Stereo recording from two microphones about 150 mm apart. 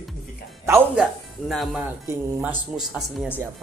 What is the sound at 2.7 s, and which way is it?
Speech, 5° right (ahead or behind).